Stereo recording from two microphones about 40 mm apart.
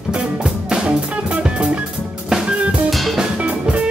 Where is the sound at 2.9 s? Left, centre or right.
Centre.